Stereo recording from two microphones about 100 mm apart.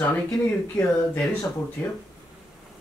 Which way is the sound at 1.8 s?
20° left (ahead or behind).